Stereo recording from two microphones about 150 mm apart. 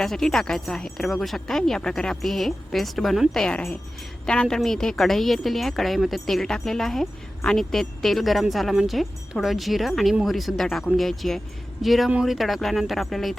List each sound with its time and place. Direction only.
0.0 s a woman's voice: 5° left (ahead or behind)